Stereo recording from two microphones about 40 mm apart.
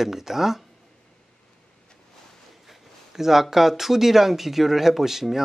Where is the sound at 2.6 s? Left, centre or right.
Centre.